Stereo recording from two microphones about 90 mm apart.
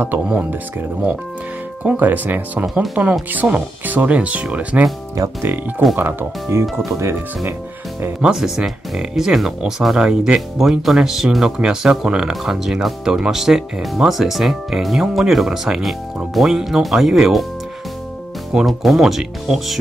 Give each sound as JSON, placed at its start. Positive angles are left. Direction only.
{"t": 0.3, "sound": "speech", "side_deg": -20}
{"t": 1.8, "sound": "speech", "side_deg": -15}
{"t": 2.6, "sound": "speech", "side_deg": -5}
{"t": 3.1, "sound": "speech", "side_deg": -15}
{"t": 5.9, "sound": "speech", "side_deg": -25}
{"t": 8.2, "sound": "speech", "side_deg": -10}
{"t": 18.5, "sound": "speech", "side_deg": -5}